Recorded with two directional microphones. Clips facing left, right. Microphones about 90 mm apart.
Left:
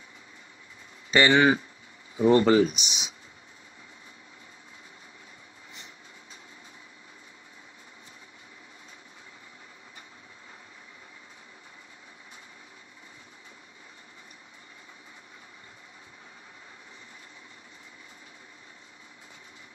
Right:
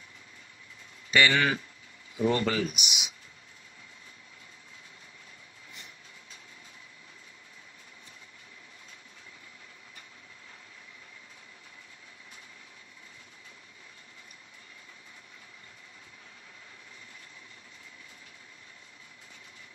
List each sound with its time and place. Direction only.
1.1 s speech: 30° left (ahead or behind)